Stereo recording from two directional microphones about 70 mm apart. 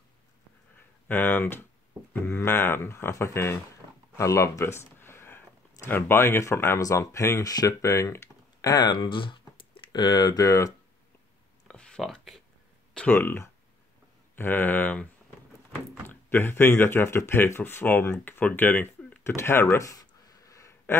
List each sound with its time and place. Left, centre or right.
1.0 s speech: left
9.9 s speech: left
11.6 s a sound: centre
13.1 s speech: left
16.1 s speech: left
19.3 s speech: left
19.8 s a sound: left